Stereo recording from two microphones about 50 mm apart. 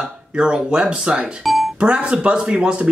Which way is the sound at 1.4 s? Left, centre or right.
Centre.